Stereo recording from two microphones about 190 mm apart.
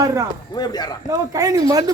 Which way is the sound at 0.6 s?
20° left (ahead or behind).